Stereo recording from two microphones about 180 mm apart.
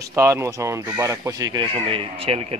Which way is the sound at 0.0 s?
15° right (ahead or behind).